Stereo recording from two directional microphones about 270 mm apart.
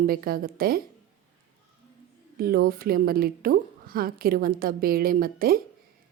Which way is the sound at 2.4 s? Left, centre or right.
Right.